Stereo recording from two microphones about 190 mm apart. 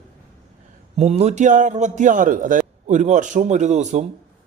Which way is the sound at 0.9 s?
35° right (ahead or behind).